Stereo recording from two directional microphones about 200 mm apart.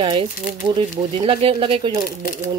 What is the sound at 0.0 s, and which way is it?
Speech, 25° right (ahead or behind).